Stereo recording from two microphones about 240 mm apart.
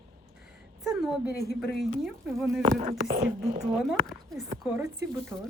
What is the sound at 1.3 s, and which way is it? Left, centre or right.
Speech, left.